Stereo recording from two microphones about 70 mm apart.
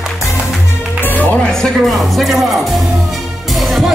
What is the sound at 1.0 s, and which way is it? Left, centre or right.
Music, left.